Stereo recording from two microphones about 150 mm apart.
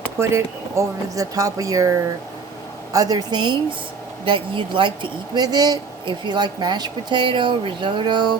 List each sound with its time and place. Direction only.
0.2 s a woman's voice: 20° right (ahead or behind)